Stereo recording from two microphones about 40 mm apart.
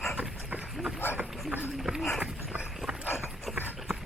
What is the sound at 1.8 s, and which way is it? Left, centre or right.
Clip-clop, centre.